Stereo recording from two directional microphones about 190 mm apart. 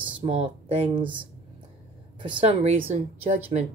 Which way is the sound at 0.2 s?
35° right (ahead or behind).